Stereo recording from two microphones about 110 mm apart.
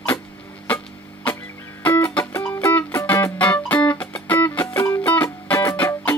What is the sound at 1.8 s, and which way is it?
Music, 15° left (ahead or behind).